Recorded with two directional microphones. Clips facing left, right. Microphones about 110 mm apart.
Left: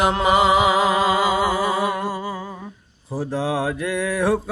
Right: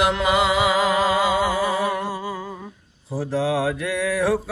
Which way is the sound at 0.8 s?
15° left (ahead or behind).